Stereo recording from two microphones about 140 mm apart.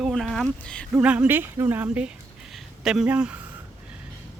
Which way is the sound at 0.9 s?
10° right (ahead or behind).